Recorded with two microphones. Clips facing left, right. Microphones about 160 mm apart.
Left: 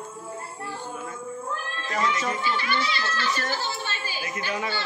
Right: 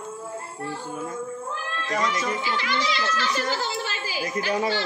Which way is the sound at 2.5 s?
90° right.